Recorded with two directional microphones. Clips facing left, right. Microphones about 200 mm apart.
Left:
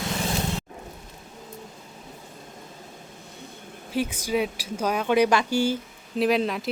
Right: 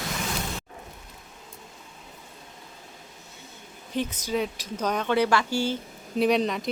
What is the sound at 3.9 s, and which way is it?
Speech, 10° left (ahead or behind).